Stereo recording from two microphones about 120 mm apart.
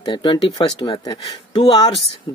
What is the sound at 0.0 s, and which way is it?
Speech, 40° left (ahead or behind).